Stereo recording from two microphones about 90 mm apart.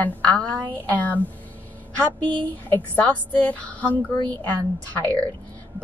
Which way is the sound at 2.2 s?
60° right (ahead or behind).